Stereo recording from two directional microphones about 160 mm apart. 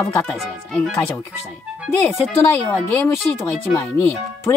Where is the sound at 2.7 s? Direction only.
10° left (ahead or behind).